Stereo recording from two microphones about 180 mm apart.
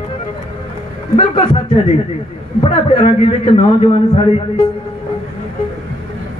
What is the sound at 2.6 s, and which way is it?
A man's voice, 30° left (ahead or behind).